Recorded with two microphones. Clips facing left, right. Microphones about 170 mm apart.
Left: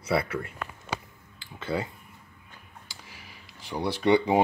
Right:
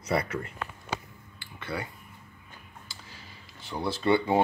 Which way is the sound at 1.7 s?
20° left (ahead or behind).